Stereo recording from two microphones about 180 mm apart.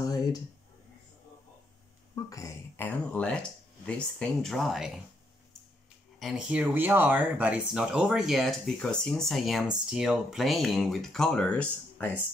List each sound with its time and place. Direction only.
0.0 s a sound: 20° left (ahead or behind)
2.2 s speech: 15° left (ahead or behind); by 5.0 s 5° right (ahead or behind)
6.1 s speech: centre (ahead or behind)